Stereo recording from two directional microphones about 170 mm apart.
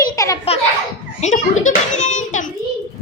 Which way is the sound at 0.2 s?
20° left (ahead or behind).